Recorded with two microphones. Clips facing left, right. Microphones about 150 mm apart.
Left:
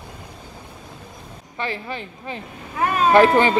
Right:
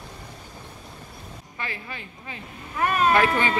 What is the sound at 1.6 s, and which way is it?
Speech, 30° left (ahead or behind).